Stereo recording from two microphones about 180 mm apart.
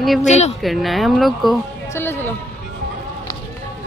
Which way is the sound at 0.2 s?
40° left (ahead or behind).